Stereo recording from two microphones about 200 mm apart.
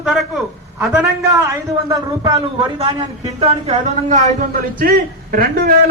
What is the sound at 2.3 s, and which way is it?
A man's voice, 30° right (ahead or behind).